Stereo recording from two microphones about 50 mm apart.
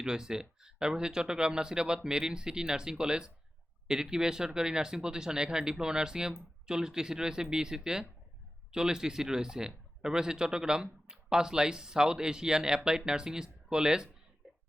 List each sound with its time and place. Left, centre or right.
0.0 s speech: centre